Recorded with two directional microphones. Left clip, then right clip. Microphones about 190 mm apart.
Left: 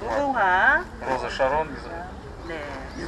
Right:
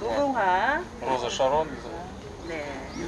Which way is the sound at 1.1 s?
20° right (ahead or behind).